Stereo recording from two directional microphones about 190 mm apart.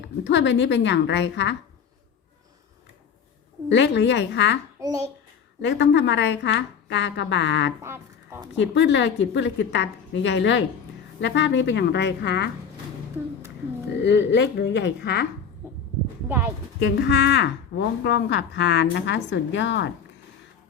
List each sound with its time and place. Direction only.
0.3 s a woman's voice: 70° left (ahead or behind)
3.7 s a woman's voice: 70° left (ahead or behind)
4.8 s a child's voice: 20° right (ahead or behind)
5.6 s a woman's voice: 70° left (ahead or behind)
7.8 s speech: 15° right (ahead or behind)
8.5 s a woman's voice: 70° left (ahead or behind)
14.0 s a woman's voice: 70° left (ahead or behind)
16.9 s a woman's voice: 65° left (ahead or behind)